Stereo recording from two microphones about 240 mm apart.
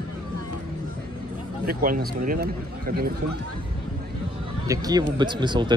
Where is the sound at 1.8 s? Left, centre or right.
Right.